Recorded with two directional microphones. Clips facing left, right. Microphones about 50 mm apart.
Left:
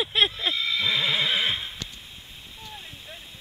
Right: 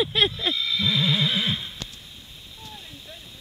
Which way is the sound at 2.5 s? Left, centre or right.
Left.